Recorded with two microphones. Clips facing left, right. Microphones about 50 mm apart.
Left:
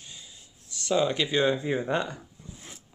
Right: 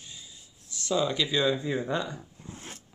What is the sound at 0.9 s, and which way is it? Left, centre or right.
Speech, left.